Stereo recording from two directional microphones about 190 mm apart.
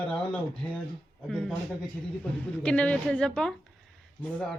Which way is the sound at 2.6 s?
5° left (ahead or behind).